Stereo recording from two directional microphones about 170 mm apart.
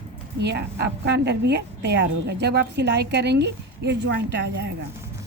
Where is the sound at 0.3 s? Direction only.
85° right.